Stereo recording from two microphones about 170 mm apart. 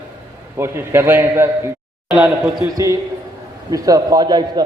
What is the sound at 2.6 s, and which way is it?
A man's voice, 20° right (ahead or behind).